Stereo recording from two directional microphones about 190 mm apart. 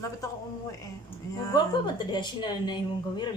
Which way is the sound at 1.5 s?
20° left (ahead or behind).